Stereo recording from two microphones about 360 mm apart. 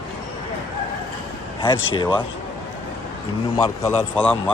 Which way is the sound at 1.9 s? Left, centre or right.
Centre.